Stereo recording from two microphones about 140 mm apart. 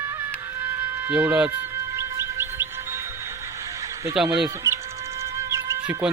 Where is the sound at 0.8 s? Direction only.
10° right (ahead or behind).